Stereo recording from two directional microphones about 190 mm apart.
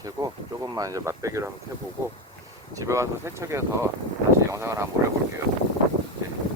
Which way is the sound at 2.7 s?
15° right (ahead or behind).